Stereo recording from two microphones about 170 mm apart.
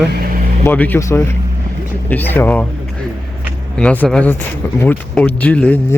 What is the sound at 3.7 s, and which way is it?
Speech, 5° left (ahead or behind).